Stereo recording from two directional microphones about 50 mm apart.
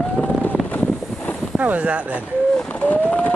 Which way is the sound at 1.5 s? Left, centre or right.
Right.